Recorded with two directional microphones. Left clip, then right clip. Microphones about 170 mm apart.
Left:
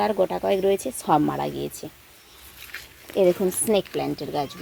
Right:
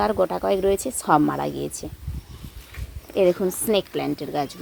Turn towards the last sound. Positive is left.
turn(degrees=0)  # may be behind; listen again after turning